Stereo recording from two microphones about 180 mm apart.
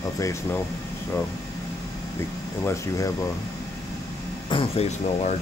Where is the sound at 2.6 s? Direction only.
15° left (ahead or behind).